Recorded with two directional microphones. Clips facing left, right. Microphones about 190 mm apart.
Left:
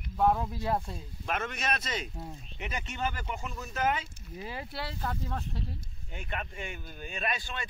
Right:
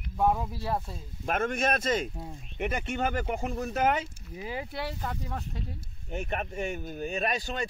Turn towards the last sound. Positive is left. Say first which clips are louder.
# right 5 dB
turn(degrees=-40)  # may be behind; listen again after turning